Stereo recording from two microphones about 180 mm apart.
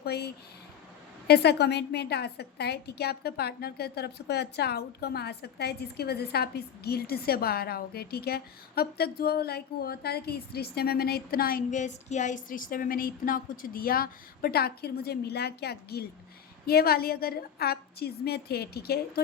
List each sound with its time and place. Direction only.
0.0 s speech: 65° left (ahead or behind)
1.3 s a woman's voice: 65° left (ahead or behind)